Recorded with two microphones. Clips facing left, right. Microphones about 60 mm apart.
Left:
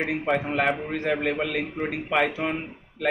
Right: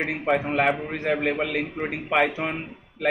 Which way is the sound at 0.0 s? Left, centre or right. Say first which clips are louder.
Right 1 dB; centre.